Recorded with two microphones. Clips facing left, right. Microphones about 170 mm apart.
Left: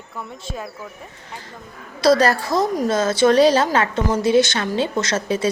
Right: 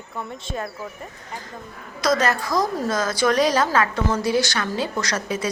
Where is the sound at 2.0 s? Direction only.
35° left (ahead or behind).